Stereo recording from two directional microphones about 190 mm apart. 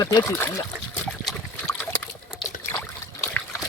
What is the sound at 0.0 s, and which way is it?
Speech, 15° left (ahead or behind).